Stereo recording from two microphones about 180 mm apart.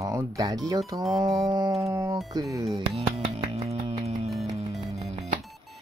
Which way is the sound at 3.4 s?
35° right (ahead or behind).